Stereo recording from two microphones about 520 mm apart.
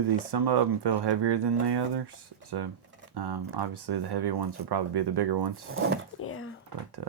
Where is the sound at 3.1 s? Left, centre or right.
Right.